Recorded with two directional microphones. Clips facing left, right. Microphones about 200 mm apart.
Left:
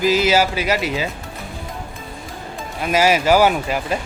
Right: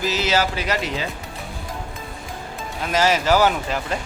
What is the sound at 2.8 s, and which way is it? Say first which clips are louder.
Speech: left 3 dB; 10° left (ahead or behind).